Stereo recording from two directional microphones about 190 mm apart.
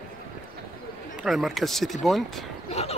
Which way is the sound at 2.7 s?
35° left (ahead or behind).